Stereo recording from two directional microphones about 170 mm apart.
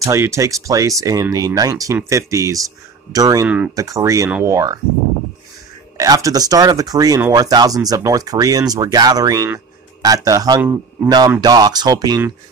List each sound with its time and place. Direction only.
0.0 s speech: 15° right (ahead or behind)
3.4 s speech: 5° right (ahead or behind)
3.7 s speech: 20° right (ahead or behind)
5.9 s speech: 20° right (ahead or behind)